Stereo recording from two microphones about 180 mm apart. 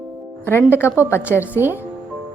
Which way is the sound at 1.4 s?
10° right (ahead or behind).